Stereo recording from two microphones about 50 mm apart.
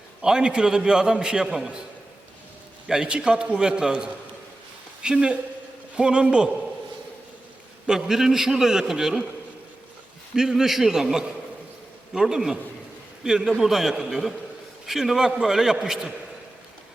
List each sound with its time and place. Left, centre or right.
0.2 s a man's voice: centre
2.8 s a man's voice: centre
7.9 s a man's voice: centre
10.3 s a man's voice: centre